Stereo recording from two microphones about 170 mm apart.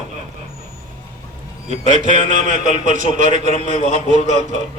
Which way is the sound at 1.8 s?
45° right (ahead or behind).